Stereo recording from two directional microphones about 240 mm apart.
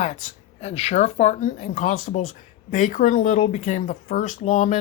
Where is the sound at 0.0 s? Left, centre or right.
Left.